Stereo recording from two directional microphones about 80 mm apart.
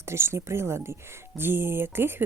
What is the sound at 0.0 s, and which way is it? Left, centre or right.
A woman's voice, right.